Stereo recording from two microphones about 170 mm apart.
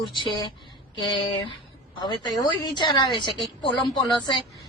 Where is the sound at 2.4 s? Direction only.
25° left (ahead or behind).